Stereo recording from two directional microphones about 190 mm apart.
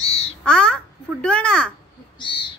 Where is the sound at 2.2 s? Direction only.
25° left (ahead or behind).